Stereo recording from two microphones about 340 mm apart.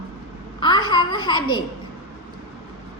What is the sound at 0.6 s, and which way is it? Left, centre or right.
Babbling, centre.